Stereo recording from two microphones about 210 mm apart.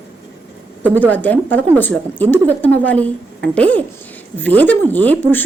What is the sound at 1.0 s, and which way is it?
A woman's voice, 10° left (ahead or behind).